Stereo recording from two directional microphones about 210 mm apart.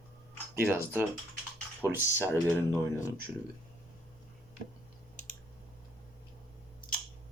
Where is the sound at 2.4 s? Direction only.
10° left (ahead or behind).